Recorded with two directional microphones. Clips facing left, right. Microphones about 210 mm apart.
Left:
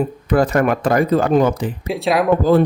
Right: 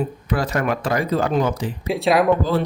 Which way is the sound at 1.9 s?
Centre (ahead or behind).